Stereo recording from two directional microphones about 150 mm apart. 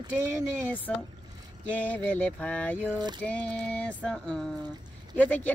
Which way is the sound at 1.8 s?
10° left (ahead or behind).